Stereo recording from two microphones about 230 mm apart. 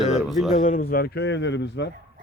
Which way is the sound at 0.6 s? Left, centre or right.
Left.